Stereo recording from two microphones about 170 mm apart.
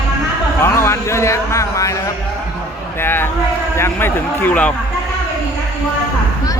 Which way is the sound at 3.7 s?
15° left (ahead or behind).